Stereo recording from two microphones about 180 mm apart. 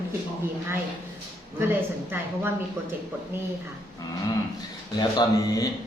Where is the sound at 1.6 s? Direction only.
10° right (ahead or behind).